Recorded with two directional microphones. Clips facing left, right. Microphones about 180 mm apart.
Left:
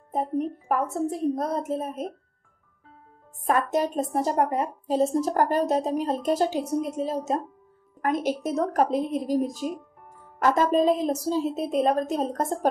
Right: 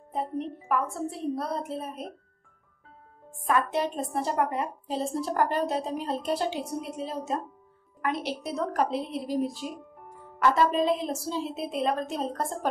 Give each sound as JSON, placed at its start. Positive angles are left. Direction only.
{"t": 0.4, "sound": "a woman's voice", "side_deg": 45}
{"t": 3.4, "sound": "a woman's voice", "side_deg": 40}